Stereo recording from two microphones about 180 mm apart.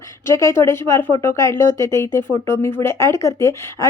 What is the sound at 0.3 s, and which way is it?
Speech, 15° left (ahead or behind).